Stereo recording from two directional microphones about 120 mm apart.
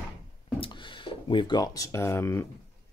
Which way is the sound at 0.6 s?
45° left (ahead or behind).